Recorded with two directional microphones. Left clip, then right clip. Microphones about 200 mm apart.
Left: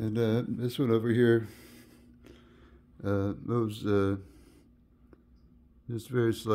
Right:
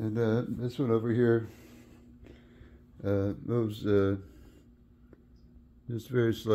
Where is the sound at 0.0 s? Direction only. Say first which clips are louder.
Even; 20° left (ahead or behind).